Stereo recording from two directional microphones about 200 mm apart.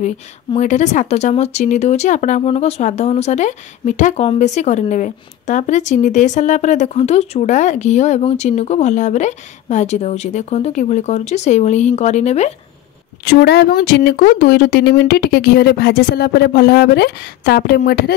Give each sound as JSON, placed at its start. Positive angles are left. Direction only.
{"t": 0.6, "sound": "speech", "side_deg": 35}
{"t": 13.2, "sound": "speech", "side_deg": 55}